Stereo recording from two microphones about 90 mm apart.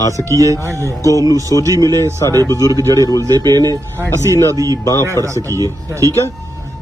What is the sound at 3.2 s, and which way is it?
Speech, 45° right (ahead or behind).